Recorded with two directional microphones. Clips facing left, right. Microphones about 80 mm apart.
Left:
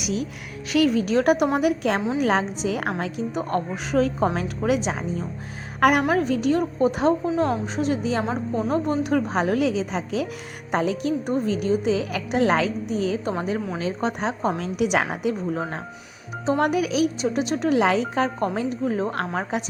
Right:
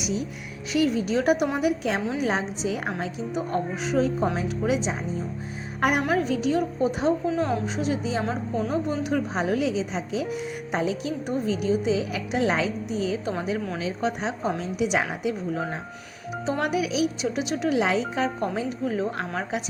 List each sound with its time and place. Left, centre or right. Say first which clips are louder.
0.0 s a woman's voice: left 2 dB; left
6.1 s a woman's voice: left 3 dB; left
8.7 s a woman's voice: left 5 dB; left